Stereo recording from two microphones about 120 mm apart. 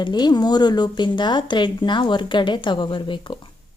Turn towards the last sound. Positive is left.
turn(degrees=40)  # may be behind; listen again after turning